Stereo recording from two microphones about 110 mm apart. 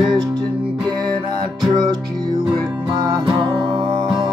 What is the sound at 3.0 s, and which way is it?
Music, 40° right (ahead or behind).